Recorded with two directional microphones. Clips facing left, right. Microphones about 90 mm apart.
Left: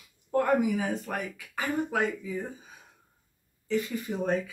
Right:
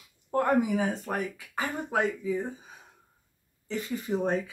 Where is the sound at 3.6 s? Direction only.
30° right (ahead or behind).